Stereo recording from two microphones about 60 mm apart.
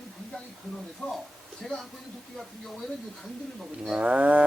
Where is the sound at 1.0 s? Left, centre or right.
Centre.